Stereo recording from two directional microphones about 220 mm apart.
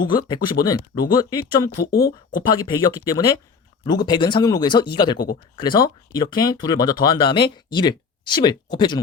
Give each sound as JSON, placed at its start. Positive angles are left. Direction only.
{"t": 0.0, "sound": "speech", "side_deg": 20}
{"t": 1.7, "sound": "a woman's voice", "side_deg": 45}
{"t": 2.4, "sound": "speech", "side_deg": 20}